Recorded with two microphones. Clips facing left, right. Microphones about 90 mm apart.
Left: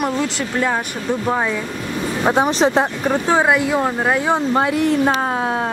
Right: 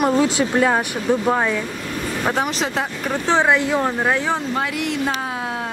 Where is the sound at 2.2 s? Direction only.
20° left (ahead or behind).